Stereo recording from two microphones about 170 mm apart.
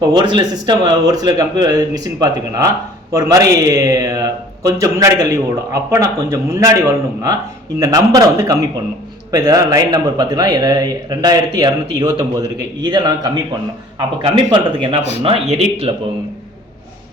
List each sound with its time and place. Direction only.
0.0 s speech: 25° right (ahead or behind)
14.5 s speech: 30° right (ahead or behind)